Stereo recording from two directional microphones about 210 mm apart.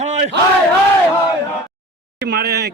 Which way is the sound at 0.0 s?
35° right (ahead or behind).